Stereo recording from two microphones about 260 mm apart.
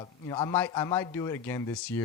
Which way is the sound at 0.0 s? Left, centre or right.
Centre.